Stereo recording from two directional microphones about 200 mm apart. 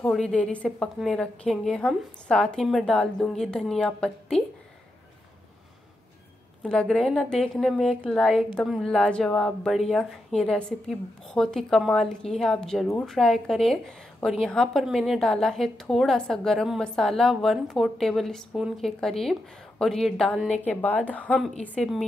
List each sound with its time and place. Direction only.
0.0 s a woman's voice: 5° left (ahead or behind)
6.6 s a woman's voice: 5° left (ahead or behind)